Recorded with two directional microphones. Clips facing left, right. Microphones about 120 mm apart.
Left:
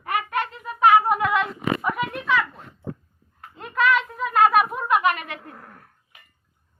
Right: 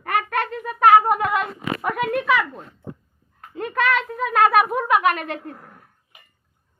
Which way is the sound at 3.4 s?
55° right (ahead or behind).